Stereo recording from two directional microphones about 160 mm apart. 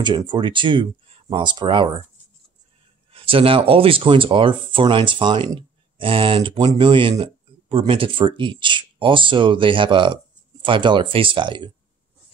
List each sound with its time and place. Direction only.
0.0 s speech: 30° right (ahead or behind)
3.1 s speech: 35° right (ahead or behind)